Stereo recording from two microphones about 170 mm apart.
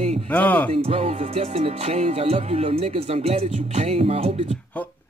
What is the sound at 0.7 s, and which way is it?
Music, 35° right (ahead or behind).